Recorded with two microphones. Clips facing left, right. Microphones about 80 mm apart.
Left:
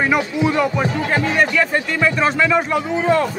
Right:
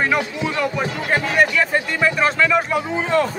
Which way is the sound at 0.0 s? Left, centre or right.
Centre.